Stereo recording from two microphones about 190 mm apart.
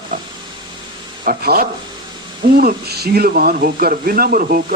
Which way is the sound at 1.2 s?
50° right (ahead or behind).